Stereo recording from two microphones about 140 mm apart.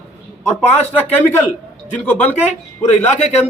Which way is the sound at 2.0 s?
15° left (ahead or behind).